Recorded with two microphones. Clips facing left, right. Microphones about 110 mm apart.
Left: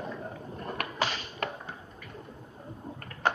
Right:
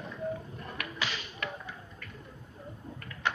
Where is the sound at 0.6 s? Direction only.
40° left (ahead or behind).